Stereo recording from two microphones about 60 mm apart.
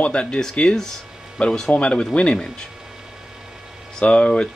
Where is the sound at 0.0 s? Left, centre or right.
Centre.